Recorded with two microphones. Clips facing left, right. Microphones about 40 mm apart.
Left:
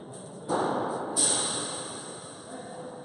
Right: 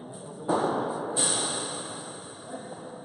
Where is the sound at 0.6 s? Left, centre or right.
Centre.